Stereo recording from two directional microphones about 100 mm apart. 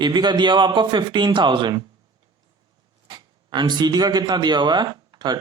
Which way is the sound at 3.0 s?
50° right (ahead or behind).